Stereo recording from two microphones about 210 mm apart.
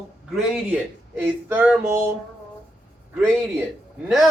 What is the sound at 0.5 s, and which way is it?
Speech, 5° right (ahead or behind).